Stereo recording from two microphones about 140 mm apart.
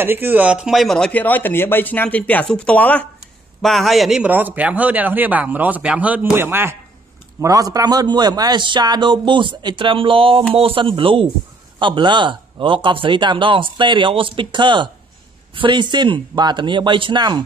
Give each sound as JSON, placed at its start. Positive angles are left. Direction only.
{"t": 0.0, "sound": "a man's voice", "side_deg": -15}
{"t": 4.3, "sound": "speech", "side_deg": -10}